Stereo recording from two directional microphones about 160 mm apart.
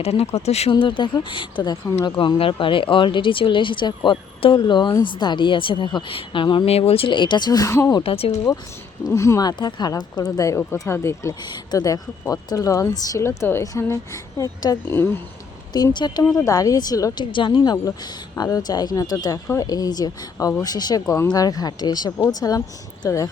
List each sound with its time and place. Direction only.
0.0 s speech: 40° left (ahead or behind); by 8.0 s 20° left (ahead or behind)
8.0 s speech: 35° left (ahead or behind)
9.1 s speech: 20° left (ahead or behind)
15.7 s speech: 25° left (ahead or behind)